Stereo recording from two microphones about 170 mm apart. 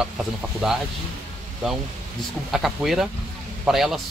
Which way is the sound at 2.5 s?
Centre (ahead or behind).